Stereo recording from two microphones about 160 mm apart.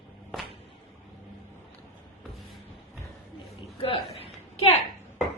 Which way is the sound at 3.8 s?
35° left (ahead or behind).